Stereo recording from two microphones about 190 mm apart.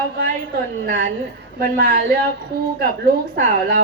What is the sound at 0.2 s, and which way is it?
A woman's voice, 50° right (ahead or behind).